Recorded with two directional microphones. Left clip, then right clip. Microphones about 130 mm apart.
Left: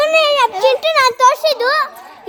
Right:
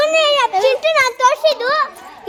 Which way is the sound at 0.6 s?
60° left (ahead or behind).